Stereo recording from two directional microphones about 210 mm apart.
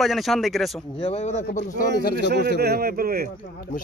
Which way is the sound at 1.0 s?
30° left (ahead or behind).